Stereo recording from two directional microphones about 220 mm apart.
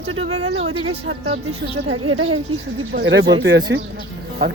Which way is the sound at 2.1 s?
65° right (ahead or behind).